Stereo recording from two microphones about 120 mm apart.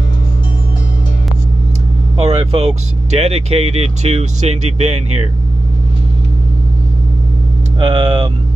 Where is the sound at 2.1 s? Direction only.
60° right (ahead or behind).